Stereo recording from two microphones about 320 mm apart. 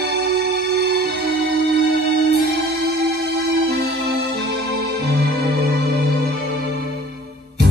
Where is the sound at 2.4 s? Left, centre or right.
Right.